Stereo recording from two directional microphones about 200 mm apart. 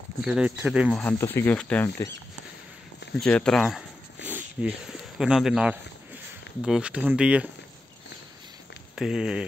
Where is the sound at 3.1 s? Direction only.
5° left (ahead or behind).